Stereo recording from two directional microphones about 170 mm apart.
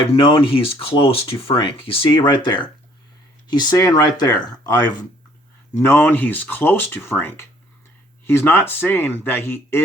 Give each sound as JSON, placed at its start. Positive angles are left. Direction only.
{"t": 0.1, "sound": "speech", "side_deg": 30}
{"t": 5.7, "sound": "speech", "side_deg": 15}